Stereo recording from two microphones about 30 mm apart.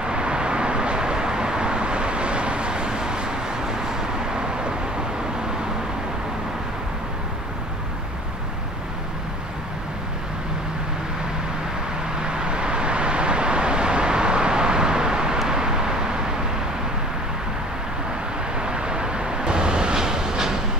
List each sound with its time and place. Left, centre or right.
0.0 s vehicle: right
12.2 s vehicle: right
18.6 s vehicle: right